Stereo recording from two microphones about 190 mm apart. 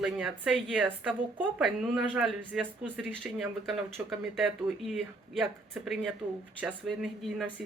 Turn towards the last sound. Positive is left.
turn(degrees=-5)  # may be behind; listen again after turning